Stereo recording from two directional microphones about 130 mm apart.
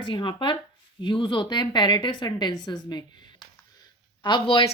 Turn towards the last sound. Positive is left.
turn(degrees=40)  # may be behind; listen again after turning